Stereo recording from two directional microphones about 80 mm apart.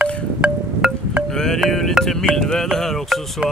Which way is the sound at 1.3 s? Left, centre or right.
Centre.